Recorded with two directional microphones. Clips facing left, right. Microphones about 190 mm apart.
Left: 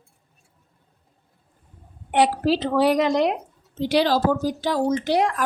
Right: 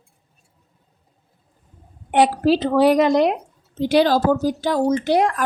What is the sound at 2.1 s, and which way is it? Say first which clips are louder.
Speech: right 3 dB; 50° right (ahead or behind).